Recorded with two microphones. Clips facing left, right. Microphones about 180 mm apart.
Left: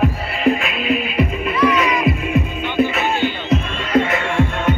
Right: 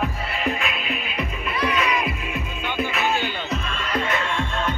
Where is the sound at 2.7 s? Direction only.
50° left (ahead or behind).